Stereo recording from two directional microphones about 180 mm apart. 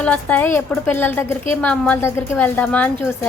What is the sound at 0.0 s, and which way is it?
A woman's voice, 10° left (ahead or behind).